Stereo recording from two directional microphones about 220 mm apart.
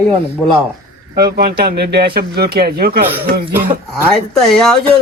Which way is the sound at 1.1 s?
45° right (ahead or behind).